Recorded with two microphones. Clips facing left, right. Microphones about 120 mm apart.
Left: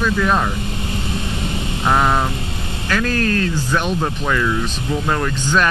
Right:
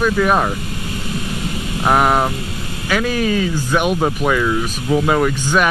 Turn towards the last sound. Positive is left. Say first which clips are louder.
# right 3 dB
turn(degrees=-10)  # may be behind; listen again after turning